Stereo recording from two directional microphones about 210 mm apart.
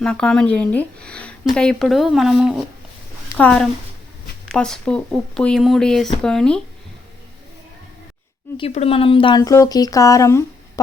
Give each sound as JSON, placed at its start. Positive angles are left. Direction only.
{"t": 0.0, "sound": "speech", "side_deg": 5}
{"t": 8.5, "sound": "speech", "side_deg": 30}